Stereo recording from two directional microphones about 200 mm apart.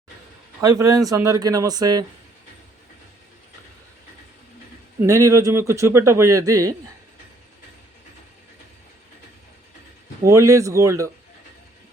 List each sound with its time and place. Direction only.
0.6 s a man's voice: 15° right (ahead or behind)
5.0 s a man's voice: 15° right (ahead or behind)
10.2 s a man's voice: 15° right (ahead or behind)